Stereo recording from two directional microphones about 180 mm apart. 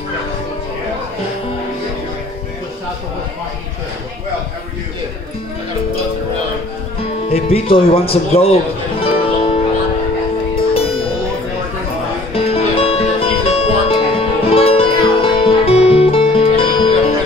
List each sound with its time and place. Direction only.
7.2 s speech: 35° left (ahead or behind)
9.0 s music: 30° left (ahead or behind)
12.4 s music: 30° left (ahead or behind)